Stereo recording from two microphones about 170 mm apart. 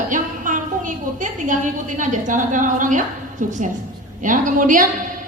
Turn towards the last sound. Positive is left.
turn(degrees=-50)  # may be behind; listen again after turning